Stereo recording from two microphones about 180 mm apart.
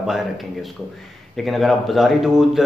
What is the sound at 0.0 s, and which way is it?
A man's voice, centre (ahead or behind).